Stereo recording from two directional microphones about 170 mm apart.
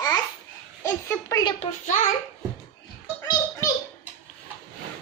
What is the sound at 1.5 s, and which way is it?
Speech, 50° left (ahead or behind).